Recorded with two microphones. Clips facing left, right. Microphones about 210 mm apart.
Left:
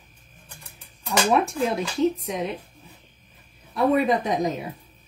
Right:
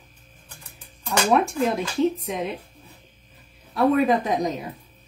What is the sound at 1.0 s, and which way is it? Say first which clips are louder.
Speech: right 1 dB; centre (ahead or behind).